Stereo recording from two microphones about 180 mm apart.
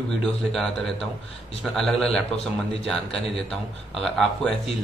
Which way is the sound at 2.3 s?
35° left (ahead or behind).